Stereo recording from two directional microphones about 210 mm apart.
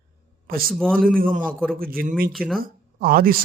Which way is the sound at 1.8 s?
45° right (ahead or behind).